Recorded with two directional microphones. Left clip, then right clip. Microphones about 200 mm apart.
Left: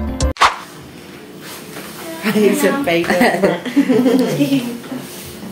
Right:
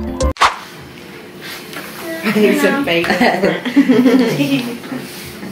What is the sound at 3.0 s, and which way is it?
Speech, 10° left (ahead or behind).